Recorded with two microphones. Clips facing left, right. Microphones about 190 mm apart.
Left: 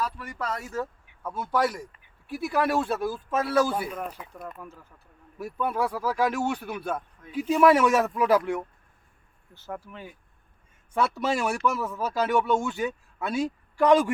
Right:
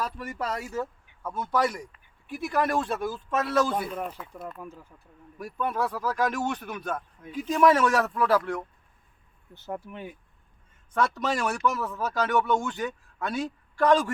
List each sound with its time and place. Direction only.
0.3 s speech: 10° right (ahead or behind)
1.3 s speech: 5° left (ahead or behind)
9.6 s speech: 20° right (ahead or behind)
10.9 s a man's voice: 10° left (ahead or behind)